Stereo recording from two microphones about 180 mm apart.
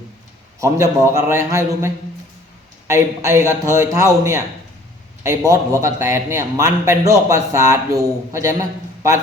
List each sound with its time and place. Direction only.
0.6 s a man's voice: 15° right (ahead or behind)